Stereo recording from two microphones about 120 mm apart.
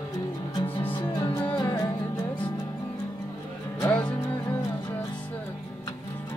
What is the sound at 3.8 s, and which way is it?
Music, 15° left (ahead or behind).